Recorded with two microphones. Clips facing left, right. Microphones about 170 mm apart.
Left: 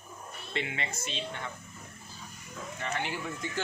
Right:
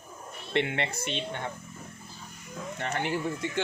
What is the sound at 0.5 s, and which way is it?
Speech, 65° right (ahead or behind).